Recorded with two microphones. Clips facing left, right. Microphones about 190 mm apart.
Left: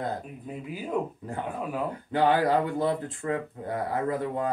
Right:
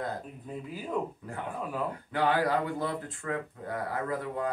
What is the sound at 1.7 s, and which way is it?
Speech, 25° left (ahead or behind).